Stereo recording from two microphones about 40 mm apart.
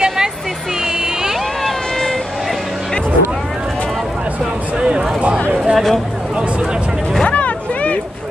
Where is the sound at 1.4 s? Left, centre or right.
Centre.